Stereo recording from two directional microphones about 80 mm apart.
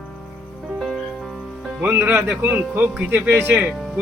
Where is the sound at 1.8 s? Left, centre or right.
Right.